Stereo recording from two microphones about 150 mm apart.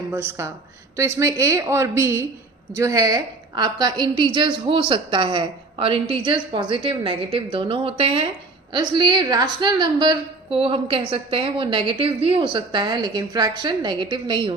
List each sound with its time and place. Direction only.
0.1 s a woman's voice: 15° right (ahead or behind); by 14.5 s 35° right (ahead or behind)